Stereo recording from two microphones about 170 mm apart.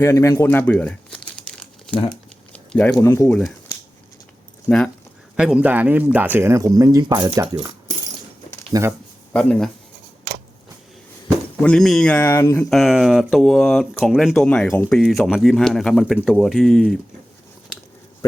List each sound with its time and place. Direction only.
0.0 s crumpling: 15° left (ahead or behind)
2.5 s a sound: 10° left (ahead or behind)
2.9 s speech: 15° left (ahead or behind)
4.7 s speech: 10° left (ahead or behind)
5.4 s speech: 5° right (ahead or behind)
8.7 s speech: 20° right (ahead or behind)
9.3 s speech: 5° left (ahead or behind)
11.6 s speech: 5° left (ahead or behind)
12.5 s speech: centre (ahead or behind)
14.9 s speech: centre (ahead or behind)